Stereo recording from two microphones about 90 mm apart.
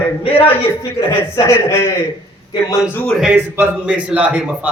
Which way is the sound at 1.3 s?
35° left (ahead or behind).